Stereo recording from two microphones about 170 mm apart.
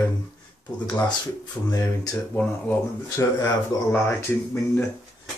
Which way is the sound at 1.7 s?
20° left (ahead or behind).